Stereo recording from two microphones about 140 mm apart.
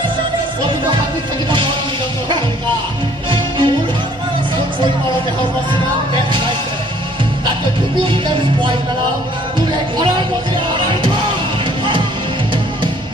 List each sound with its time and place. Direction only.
3.3 s music: 35° right (ahead or behind)
8.0 s music: 35° right (ahead or behind)